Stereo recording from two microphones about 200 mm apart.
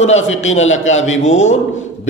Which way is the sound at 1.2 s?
35° left (ahead or behind).